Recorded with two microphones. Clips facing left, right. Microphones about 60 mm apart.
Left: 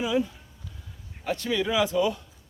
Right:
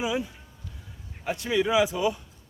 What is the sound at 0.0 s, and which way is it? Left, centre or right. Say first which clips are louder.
A man's voice: left 3 dB; centre.